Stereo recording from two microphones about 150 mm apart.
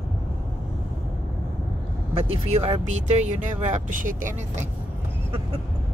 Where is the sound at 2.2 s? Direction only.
40° right (ahead or behind); by 4.3 s 60° right (ahead or behind).